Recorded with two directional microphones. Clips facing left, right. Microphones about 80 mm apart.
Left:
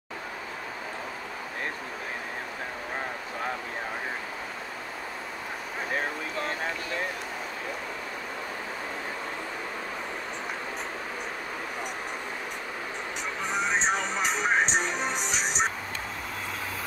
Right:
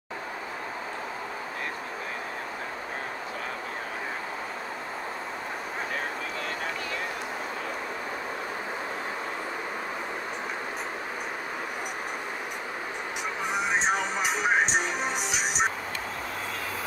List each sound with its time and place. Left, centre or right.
13.4 s music: centre